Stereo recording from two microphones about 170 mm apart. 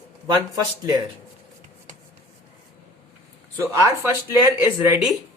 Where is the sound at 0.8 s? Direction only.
25° right (ahead or behind).